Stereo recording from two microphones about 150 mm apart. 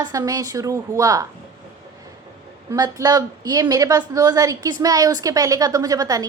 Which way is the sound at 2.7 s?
25° right (ahead or behind).